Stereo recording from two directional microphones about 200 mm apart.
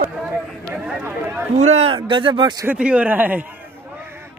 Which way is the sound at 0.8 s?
10° right (ahead or behind).